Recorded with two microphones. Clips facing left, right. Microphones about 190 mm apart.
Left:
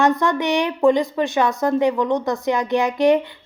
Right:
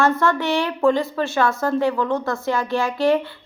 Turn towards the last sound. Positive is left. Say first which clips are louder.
# left 3 dB
turn(degrees=15)  # may be behind; listen again after turning